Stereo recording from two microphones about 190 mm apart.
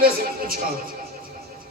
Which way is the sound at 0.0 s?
50° right (ahead or behind).